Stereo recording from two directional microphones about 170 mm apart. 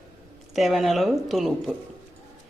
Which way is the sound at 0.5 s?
Centre (ahead or behind).